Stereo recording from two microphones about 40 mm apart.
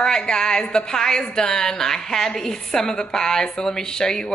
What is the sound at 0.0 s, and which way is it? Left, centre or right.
A woman's voice, centre.